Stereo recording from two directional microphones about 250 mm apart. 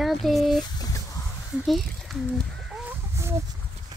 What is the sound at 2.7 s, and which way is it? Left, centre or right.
Chicken, centre.